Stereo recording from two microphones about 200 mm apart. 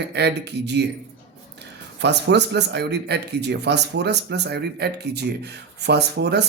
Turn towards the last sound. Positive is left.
turn(degrees=-55)  # may be behind; listen again after turning